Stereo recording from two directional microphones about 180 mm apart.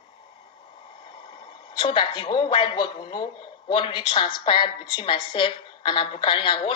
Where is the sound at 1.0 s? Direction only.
30° left (ahead or behind).